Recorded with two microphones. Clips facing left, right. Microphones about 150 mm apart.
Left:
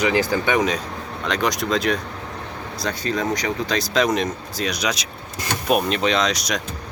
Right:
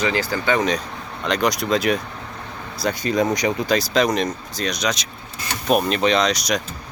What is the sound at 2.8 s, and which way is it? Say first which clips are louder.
Speech: right 4 dB; 15° right (ahead or behind).